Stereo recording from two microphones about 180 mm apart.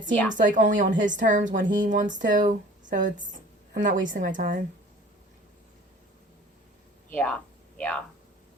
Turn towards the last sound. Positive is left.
turn(degrees=5)  # may be behind; listen again after turning